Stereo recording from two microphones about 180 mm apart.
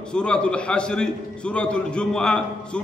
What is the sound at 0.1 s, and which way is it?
A man's voice, 5° left (ahead or behind).